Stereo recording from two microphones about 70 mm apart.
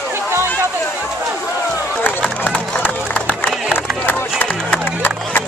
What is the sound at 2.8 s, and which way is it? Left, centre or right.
Crowd, left.